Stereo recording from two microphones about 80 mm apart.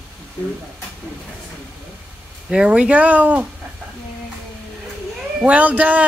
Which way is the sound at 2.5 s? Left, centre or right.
Centre.